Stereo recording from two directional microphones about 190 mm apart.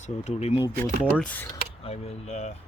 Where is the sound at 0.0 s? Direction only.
35° left (ahead or behind).